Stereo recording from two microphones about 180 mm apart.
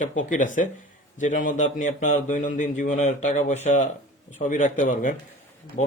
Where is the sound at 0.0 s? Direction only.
45° left (ahead or behind).